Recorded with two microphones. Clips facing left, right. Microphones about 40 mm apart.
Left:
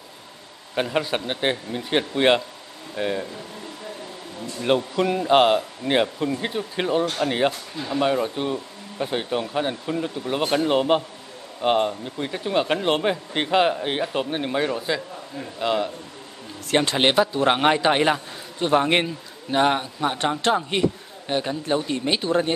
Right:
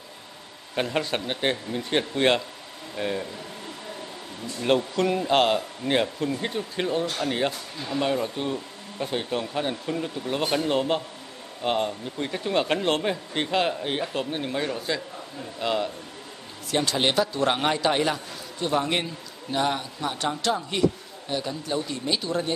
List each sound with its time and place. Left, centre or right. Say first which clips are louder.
0.7 s speech: left 3 dB; centre
4.6 s speech: left 2 dB; centre
12.9 s a man's voice: left 3 dB; centre
16.7 s a man's voice: left 4 dB; left